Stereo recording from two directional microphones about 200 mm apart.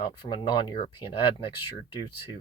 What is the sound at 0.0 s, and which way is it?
Speech, 25° left (ahead or behind).